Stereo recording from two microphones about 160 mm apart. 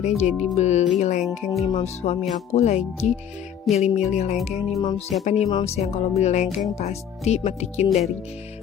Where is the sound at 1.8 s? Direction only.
40° left (ahead or behind).